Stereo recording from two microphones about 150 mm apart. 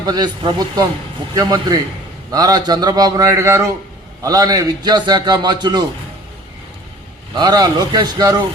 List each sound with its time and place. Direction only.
0.0 s a man's voice: 25° right (ahead or behind)
7.3 s a man's voice: 25° right (ahead or behind)